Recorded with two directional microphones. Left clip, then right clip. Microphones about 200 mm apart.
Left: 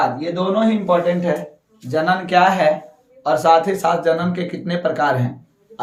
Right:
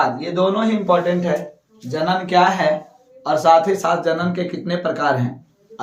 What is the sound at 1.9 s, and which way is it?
Speech, 30° left (ahead or behind).